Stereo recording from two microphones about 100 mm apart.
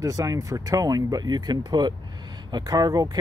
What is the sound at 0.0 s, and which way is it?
Speech, 35° right (ahead or behind).